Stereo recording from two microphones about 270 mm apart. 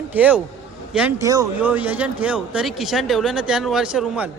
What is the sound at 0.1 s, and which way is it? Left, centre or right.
Speech, centre.